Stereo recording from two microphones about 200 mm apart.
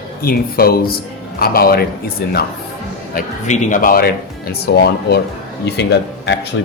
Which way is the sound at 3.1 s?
35° left (ahead or behind).